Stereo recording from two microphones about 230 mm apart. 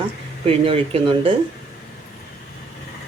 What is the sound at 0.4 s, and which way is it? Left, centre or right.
Speech, right.